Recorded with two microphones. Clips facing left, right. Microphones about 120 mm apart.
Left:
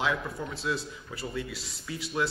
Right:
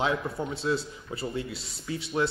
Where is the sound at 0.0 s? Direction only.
30° right (ahead or behind).